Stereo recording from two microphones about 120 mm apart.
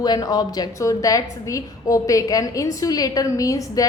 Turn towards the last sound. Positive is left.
turn(degrees=30)  # may be behind; listen again after turning